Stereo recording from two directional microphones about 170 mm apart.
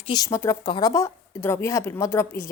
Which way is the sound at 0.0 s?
25° left (ahead or behind).